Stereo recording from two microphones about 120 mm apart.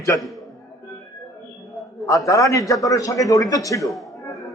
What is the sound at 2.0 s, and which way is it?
A man's voice, 25° left (ahead or behind).